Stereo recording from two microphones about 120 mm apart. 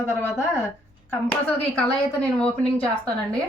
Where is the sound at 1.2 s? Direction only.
10° left (ahead or behind).